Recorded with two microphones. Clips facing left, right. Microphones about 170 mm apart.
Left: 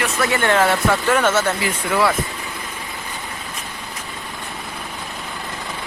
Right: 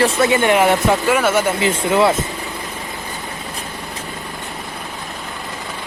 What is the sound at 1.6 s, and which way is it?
Speech, 25° right (ahead or behind).